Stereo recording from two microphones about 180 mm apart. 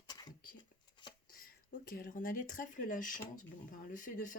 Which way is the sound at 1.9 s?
50° left (ahead or behind).